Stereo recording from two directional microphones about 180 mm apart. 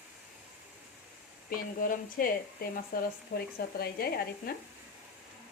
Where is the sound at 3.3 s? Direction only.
65° left (ahead or behind).